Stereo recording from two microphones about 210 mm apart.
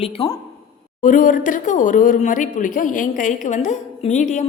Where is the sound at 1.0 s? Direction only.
40° left (ahead or behind).